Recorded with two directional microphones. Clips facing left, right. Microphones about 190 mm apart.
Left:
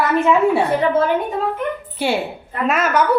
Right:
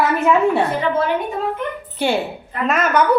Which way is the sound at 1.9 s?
5° left (ahead or behind).